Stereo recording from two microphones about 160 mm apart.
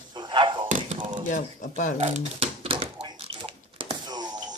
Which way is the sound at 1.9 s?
45° right (ahead or behind).